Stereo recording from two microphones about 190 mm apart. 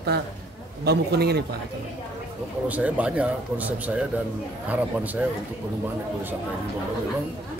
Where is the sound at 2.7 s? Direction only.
5° right (ahead or behind).